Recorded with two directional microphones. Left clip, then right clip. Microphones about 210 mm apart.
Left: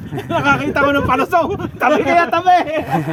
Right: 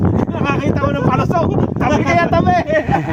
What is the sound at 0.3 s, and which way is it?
A man's voice, 5° right (ahead or behind).